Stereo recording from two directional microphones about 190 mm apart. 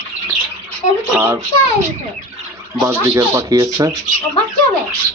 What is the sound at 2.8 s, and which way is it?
Speech, 15° right (ahead or behind).